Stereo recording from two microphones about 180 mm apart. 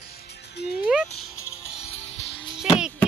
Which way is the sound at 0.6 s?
70° left (ahead or behind).